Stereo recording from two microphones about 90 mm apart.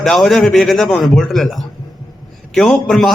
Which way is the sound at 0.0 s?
5° left (ahead or behind).